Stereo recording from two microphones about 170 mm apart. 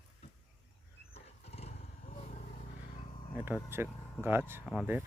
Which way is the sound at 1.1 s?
40° left (ahead or behind).